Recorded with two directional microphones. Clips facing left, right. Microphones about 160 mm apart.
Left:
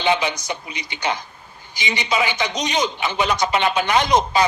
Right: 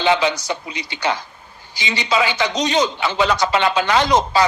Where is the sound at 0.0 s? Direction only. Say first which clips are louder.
Right 3 dB; 15° left (ahead or behind).